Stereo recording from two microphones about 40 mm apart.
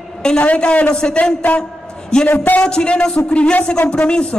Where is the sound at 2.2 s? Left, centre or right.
Left.